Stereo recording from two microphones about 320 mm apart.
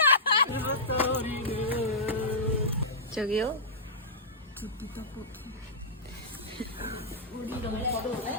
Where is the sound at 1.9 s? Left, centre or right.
Centre.